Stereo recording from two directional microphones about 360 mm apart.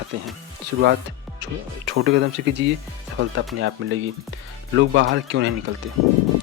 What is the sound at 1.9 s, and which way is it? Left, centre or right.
Speech, right.